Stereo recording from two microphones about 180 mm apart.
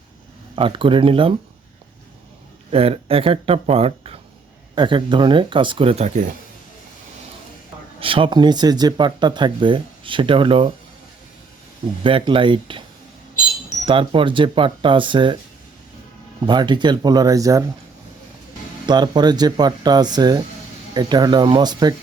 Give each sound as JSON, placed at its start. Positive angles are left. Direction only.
{"t": 0.5, "sound": "speech", "side_deg": -30}
{"t": 2.7, "sound": "speech", "side_deg": -30}
{"t": 7.9, "sound": "speech", "side_deg": -30}
{"t": 12.0, "sound": "speech", "side_deg": -30}
{"t": 13.8, "sound": "speech", "side_deg": -30}
{"t": 16.5, "sound": "speech", "side_deg": -25}
{"t": 18.9, "sound": "speech", "side_deg": -25}